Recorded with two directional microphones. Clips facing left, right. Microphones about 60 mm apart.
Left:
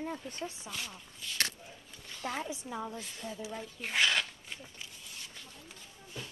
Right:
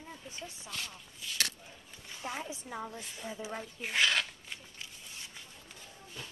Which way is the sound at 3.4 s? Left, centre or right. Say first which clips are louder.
Right 1 dB; right.